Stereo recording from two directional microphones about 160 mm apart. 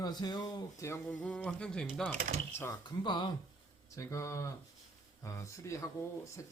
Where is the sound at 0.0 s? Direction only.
25° left (ahead or behind).